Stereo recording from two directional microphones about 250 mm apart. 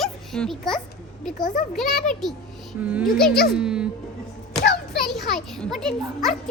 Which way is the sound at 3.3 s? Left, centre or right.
Left.